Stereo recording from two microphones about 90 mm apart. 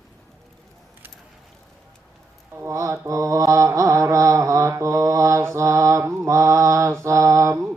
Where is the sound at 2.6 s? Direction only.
35° right (ahead or behind).